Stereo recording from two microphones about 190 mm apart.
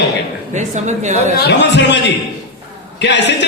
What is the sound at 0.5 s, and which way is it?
Speech, 40° right (ahead or behind).